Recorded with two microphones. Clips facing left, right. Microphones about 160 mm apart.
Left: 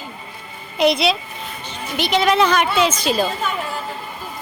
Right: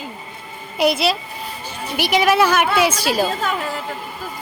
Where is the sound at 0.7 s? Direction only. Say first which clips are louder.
Left 1 dB; 5° right (ahead or behind).